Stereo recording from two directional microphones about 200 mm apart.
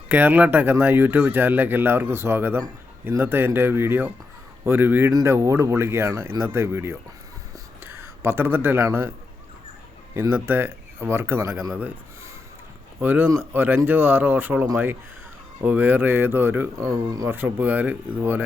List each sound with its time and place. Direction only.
0.1 s speech: 10° right (ahead or behind)
10.2 s speech: 10° right (ahead or behind)